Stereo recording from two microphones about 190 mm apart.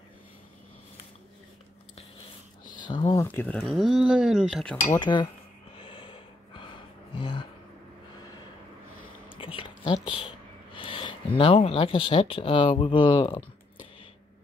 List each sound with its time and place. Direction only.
2.8 s speech: 25° left (ahead or behind)
3.3 s speech: 10° left (ahead or behind)
4.9 s speech: 25° left (ahead or behind)
5.8 s a sound: 30° left (ahead or behind)
9.4 s a sound: 25° left (ahead or behind)
10.7 s speech: 25° left (ahead or behind)